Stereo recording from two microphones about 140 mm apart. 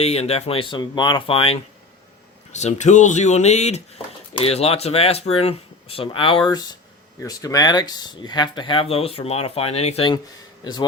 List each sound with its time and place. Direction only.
0.0 s speech: 45° left (ahead or behind)
2.5 s speech: 55° left (ahead or behind)
10.6 s a man's voice: 30° left (ahead or behind)